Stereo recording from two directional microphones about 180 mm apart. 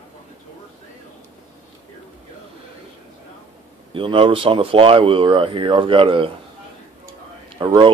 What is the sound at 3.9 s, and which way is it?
Speech, 30° right (ahead or behind).